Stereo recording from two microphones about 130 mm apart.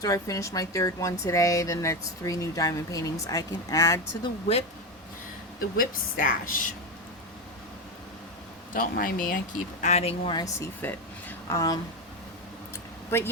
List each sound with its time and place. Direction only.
0.0 s speech: 25° left (ahead or behind)
5.7 s a woman's voice: 90° left
8.7 s a woman's voice: 90° left
9.8 s speech: 55° left (ahead or behind)
10.3 s a woman's voice: 25° left (ahead or behind)
12.7 s a sound: 20° left (ahead or behind)